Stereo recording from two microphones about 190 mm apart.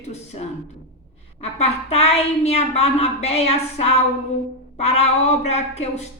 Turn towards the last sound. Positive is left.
turn(degrees=35)  # may be behind; listen again after turning